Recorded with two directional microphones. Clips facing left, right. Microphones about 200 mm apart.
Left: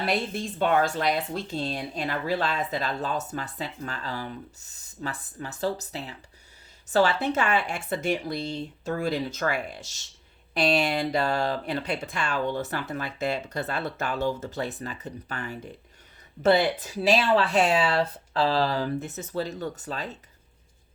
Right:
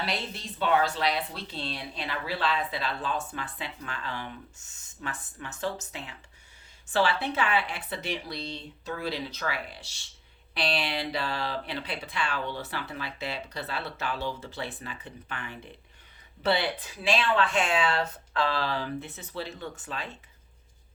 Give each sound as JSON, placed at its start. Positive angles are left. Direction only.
{"t": 0.0, "sound": "speech", "side_deg": 50}